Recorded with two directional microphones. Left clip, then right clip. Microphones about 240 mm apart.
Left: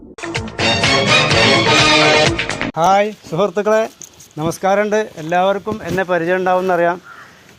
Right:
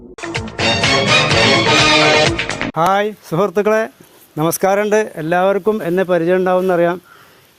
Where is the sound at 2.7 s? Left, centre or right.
Right.